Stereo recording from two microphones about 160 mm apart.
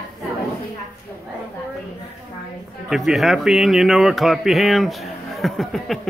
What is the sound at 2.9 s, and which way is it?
Speech, centre (ahead or behind).